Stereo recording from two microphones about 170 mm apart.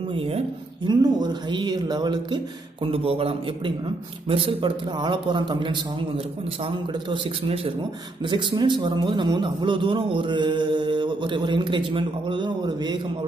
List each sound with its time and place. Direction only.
0.1 s a man's voice: 35° right (ahead or behind)